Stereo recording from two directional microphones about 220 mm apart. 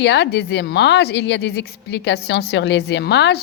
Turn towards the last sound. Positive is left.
turn(degrees=50)  # may be behind; listen again after turning